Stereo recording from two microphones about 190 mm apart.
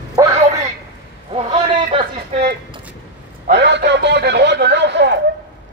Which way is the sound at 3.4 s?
65° right (ahead or behind).